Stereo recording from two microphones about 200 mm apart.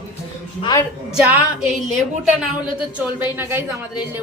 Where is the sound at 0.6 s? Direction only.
15° left (ahead or behind).